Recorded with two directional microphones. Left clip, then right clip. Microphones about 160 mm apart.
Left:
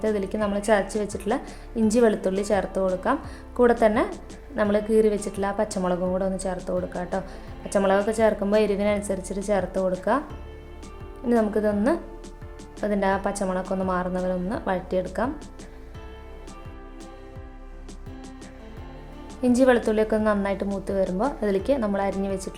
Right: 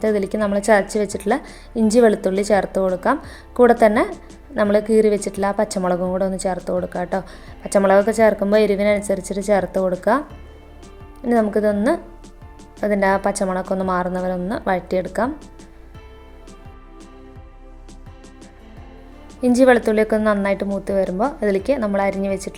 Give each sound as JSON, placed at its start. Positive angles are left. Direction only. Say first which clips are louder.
{"t": 0.0, "sound": "a woman's voice", "louder": "right 6 dB", "side_deg": -30}
{"t": 11.3, "sound": "a woman's voice", "louder": "right 5 dB", "side_deg": -25}
{"t": 19.5, "sound": "a woman's voice", "louder": "right 6 dB", "side_deg": -25}